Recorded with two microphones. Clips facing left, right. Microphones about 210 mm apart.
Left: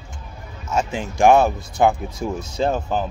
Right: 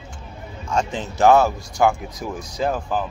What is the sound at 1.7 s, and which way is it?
Speech, 25° left (ahead or behind).